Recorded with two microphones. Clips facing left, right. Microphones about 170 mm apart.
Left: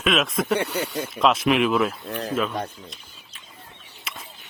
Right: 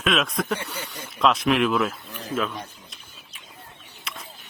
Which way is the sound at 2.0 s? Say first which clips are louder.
Left 9 dB; 65° left (ahead or behind).